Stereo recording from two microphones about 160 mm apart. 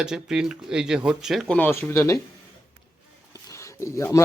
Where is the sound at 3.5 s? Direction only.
20° left (ahead or behind).